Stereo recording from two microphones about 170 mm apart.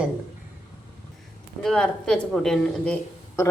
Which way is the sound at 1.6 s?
5° left (ahead or behind).